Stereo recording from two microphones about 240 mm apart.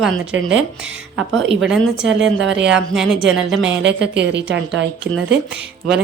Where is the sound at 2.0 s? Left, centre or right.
Right.